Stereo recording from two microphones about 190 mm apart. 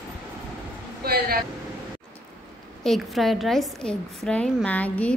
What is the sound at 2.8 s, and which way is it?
A woman's voice, centre (ahead or behind).